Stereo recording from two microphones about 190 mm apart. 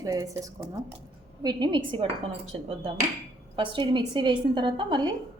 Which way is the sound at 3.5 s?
25° right (ahead or behind).